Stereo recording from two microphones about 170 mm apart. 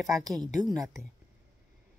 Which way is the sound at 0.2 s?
20° right (ahead or behind).